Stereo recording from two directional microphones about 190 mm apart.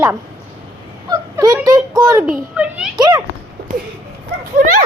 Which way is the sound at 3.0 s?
20° right (ahead or behind).